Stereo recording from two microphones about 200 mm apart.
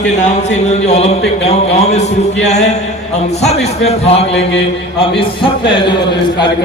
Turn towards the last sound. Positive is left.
turn(degrees=25)  # may be behind; listen again after turning